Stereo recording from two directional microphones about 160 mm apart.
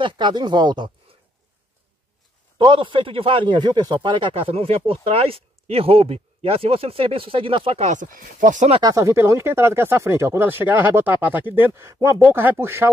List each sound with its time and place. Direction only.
0.0 s speech: 30° right (ahead or behind)
2.6 s speech: 30° right (ahead or behind); by 8.6 s 55° right (ahead or behind)
8.8 s speech: 20° right (ahead or behind)